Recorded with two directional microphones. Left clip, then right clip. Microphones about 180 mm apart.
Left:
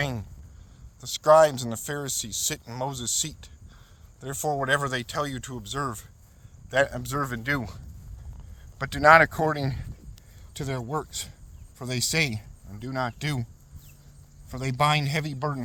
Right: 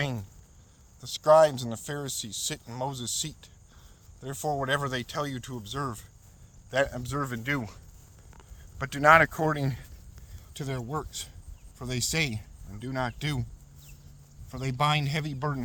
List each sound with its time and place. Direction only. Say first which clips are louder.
0.0 s a man's voice: left 3 dB; 30° left (ahead or behind)
8.8 s a man's voice: left 3 dB; 25° left (ahead or behind)
14.5 s speech: left 3 dB; 35° left (ahead or behind)